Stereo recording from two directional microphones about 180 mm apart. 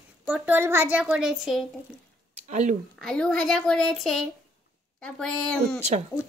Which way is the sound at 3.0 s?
5° left (ahead or behind).